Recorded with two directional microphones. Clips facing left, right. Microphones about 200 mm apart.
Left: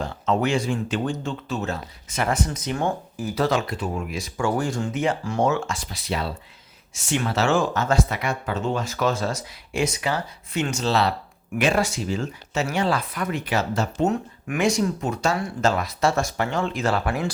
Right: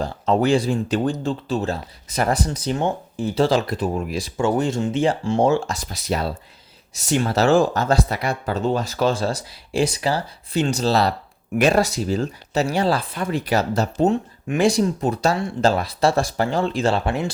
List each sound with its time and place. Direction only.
0.0 s speech: 35° right (ahead or behind)
4.4 s speech: 20° right (ahead or behind)